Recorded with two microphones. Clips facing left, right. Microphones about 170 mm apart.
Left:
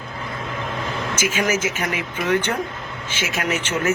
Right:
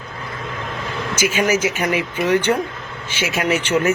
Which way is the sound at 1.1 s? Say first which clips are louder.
Right 4 dB; 10° right (ahead or behind).